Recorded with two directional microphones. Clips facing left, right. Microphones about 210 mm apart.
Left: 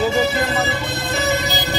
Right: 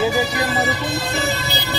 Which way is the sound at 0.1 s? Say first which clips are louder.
Left 2 dB; 25° left (ahead or behind).